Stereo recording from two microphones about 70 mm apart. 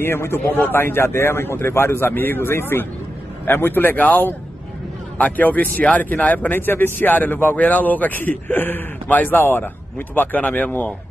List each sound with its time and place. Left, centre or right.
0.0 s a man's voice: left